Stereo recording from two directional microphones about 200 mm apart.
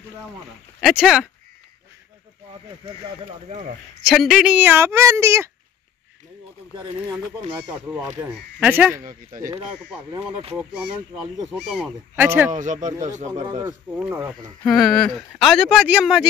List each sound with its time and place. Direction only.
0.7 s speech: centre (ahead or behind)
3.3 s speech: 35° right (ahead or behind)
4.0 s speech: centre (ahead or behind)
6.7 s speech: 20° right (ahead or behind)
7.7 s speech: 5° right (ahead or behind)
11.5 s speech: centre (ahead or behind)
12.4 s speech: 40° right (ahead or behind)
13.3 s speech: 20° right (ahead or behind)
13.9 s speech: 10° right (ahead or behind)
14.6 s speech: centre (ahead or behind)